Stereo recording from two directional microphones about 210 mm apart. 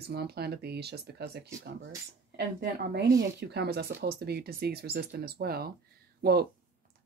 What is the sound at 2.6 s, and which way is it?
Speech, 50° right (ahead or behind).